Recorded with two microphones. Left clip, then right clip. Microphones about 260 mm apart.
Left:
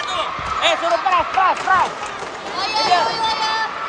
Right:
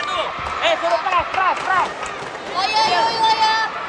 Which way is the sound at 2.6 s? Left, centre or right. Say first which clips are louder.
Even; right.